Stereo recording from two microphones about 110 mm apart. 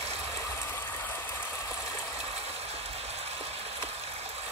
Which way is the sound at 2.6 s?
70° right (ahead or behind).